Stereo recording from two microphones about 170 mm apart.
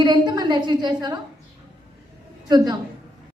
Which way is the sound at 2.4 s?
25° right (ahead or behind).